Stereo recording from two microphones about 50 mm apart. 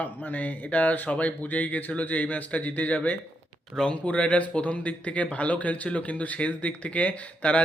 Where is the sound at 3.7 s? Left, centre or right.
Centre.